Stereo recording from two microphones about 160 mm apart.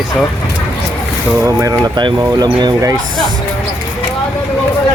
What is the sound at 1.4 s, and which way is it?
Speech, 20° right (ahead or behind).